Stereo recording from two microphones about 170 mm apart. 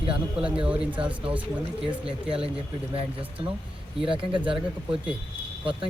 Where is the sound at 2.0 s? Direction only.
35° right (ahead or behind).